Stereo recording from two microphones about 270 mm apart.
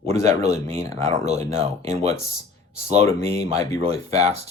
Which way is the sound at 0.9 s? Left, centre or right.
Right.